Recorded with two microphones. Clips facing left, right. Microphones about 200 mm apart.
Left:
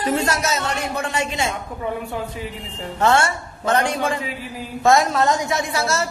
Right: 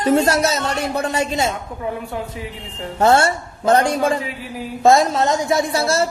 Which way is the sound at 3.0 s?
35° right (ahead or behind).